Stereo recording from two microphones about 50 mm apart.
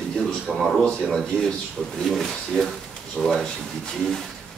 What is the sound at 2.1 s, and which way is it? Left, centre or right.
Speech, centre.